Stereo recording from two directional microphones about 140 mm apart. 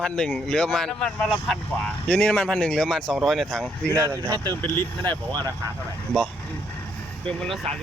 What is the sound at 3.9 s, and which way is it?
Speech, 25° right (ahead or behind).